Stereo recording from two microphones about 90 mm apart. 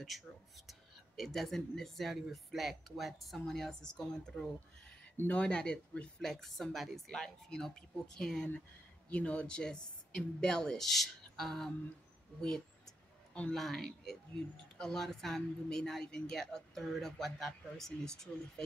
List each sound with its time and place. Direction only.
0.7 s speech: centre (ahead or behind)